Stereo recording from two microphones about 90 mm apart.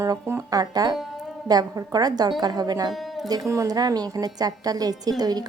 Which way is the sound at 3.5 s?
40° right (ahead or behind).